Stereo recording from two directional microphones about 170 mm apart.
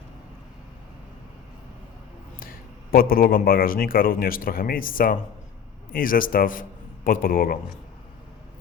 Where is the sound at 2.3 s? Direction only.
60° left (ahead or behind).